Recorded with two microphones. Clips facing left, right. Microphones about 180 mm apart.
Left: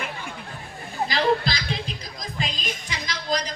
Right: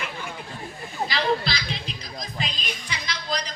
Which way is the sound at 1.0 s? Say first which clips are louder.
Left 2 dB; 45° left (ahead or behind).